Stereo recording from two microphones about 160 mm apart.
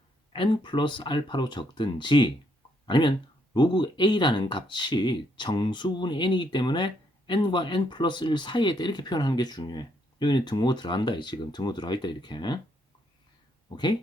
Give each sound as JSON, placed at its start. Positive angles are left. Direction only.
{"t": 0.3, "sound": "speech", "side_deg": 30}
{"t": 13.7, "sound": "speech", "side_deg": 30}